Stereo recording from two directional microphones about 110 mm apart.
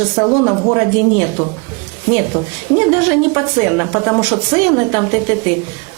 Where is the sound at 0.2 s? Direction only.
25° right (ahead or behind).